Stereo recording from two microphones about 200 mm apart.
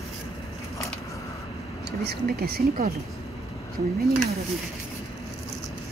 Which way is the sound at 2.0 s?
55° right (ahead or behind).